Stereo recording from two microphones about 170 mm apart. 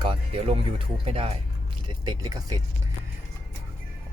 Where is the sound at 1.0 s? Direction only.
35° right (ahead or behind).